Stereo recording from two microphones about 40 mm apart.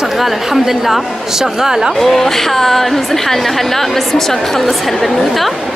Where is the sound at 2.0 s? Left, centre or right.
Centre.